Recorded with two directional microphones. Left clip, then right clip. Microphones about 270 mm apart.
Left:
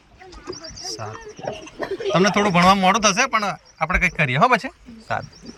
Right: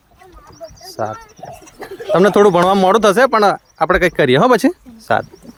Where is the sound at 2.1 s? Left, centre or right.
Right.